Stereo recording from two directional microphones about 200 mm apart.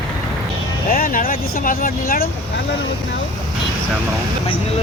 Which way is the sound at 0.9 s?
45° left (ahead or behind).